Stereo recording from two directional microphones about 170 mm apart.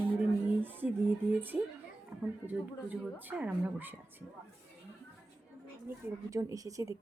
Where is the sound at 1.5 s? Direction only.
5° right (ahead or behind).